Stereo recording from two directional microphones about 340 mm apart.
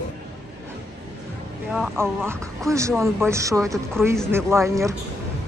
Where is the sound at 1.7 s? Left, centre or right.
Centre.